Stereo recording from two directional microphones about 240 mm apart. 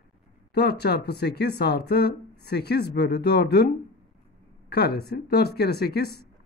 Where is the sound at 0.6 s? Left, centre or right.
Left.